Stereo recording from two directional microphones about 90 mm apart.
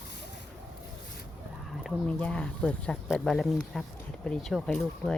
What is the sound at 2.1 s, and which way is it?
Speech, 15° left (ahead or behind).